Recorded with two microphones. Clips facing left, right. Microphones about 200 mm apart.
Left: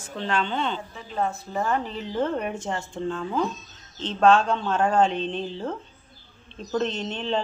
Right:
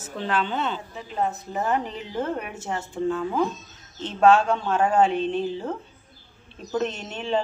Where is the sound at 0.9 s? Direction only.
20° right (ahead or behind).